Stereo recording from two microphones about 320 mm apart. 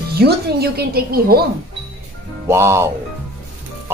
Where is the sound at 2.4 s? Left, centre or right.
Centre.